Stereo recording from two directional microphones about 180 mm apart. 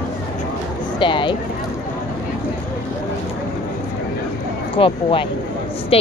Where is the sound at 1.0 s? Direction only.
25° left (ahead or behind).